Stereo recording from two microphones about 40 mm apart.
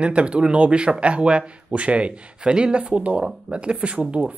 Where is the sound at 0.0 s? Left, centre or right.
Right.